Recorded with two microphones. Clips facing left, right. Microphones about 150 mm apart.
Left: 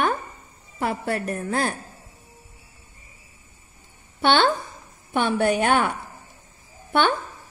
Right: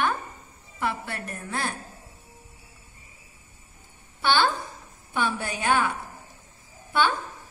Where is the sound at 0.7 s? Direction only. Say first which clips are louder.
Left 5 dB; 40° left (ahead or behind).